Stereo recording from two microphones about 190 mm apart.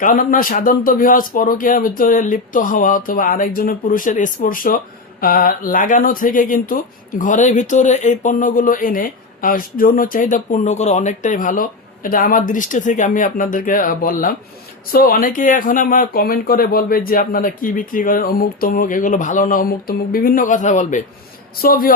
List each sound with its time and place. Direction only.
0.0 s speech: 45° left (ahead or behind)